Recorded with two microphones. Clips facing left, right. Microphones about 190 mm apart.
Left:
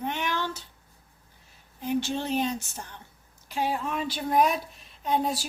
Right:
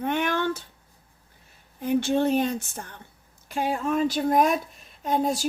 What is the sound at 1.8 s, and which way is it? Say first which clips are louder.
Speech: right 6 dB; 55° right (ahead or behind).